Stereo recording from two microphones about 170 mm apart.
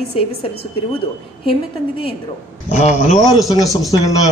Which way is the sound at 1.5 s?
35° left (ahead or behind).